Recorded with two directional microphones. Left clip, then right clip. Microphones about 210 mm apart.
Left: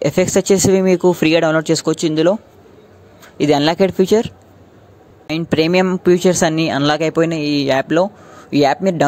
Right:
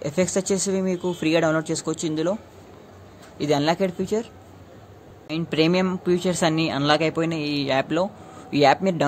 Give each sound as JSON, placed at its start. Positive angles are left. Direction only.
{"t": 0.0, "sound": "speech", "side_deg": 40}
{"t": 3.3, "sound": "speech", "side_deg": 40}
{"t": 5.3, "sound": "speech", "side_deg": 35}